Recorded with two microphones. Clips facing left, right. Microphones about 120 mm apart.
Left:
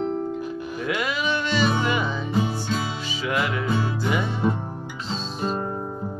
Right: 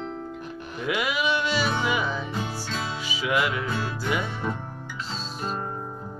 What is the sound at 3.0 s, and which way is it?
Music, 10° right (ahead or behind).